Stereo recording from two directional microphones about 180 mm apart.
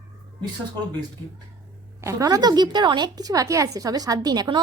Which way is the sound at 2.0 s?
15° right (ahead or behind).